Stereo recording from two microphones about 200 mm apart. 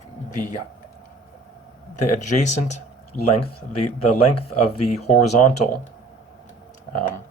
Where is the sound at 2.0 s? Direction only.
35° left (ahead or behind).